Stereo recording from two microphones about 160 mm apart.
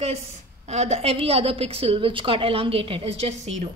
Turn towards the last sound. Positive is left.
turn(degrees=-45)  # may be behind; listen again after turning